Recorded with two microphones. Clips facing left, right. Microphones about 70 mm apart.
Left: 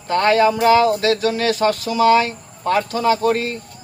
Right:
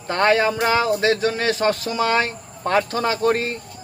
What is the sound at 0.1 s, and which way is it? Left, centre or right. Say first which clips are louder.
Speech: left 3 dB; right.